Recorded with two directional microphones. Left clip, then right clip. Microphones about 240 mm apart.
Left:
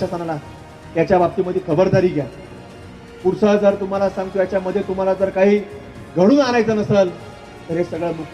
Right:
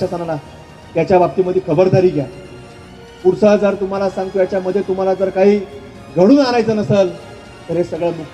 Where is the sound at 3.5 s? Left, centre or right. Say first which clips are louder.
Right 2 dB; right.